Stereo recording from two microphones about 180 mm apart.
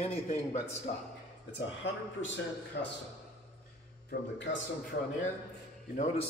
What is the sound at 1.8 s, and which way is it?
A man's voice, 80° left.